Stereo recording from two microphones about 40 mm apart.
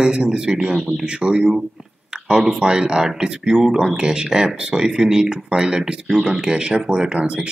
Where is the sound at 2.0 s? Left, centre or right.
Centre.